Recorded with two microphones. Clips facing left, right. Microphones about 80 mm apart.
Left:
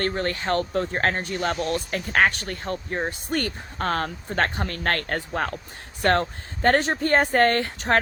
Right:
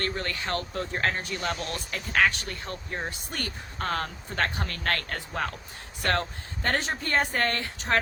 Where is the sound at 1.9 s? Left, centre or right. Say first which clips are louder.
Left 2 dB; left.